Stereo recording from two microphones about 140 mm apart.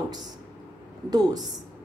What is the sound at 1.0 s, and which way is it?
Speech, 25° right (ahead or behind).